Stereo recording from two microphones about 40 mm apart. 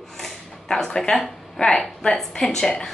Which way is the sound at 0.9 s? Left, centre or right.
Centre.